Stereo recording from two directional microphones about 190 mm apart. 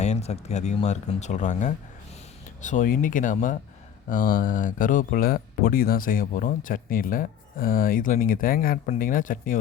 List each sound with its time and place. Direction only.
0.0 s speech: 35° left (ahead or behind)